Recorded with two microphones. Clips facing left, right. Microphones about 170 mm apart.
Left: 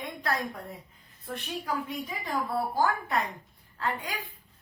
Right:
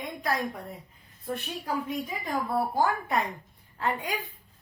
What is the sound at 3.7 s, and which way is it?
Speech, 25° right (ahead or behind).